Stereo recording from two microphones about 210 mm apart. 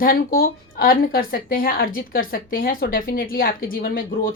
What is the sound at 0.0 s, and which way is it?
A woman's voice, 45° left (ahead or behind).